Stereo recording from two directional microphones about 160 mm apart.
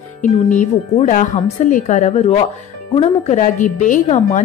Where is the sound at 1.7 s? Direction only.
50° left (ahead or behind).